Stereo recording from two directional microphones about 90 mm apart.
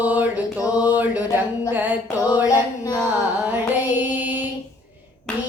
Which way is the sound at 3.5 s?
20° right (ahead or behind).